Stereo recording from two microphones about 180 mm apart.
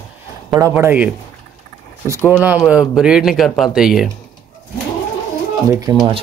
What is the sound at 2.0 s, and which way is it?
Speech, 15° left (ahead or behind).